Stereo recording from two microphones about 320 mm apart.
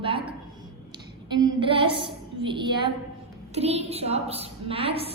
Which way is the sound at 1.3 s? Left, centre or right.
Centre.